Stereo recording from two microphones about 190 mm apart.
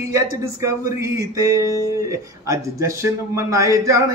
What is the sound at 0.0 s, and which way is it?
Speech, 15° right (ahead or behind).